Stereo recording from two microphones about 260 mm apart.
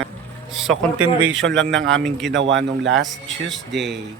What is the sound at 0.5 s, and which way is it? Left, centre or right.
Speech, centre.